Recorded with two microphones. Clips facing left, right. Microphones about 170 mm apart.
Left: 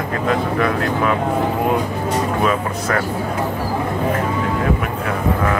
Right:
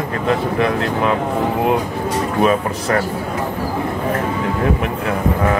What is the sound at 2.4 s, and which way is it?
Speech, 25° right (ahead or behind).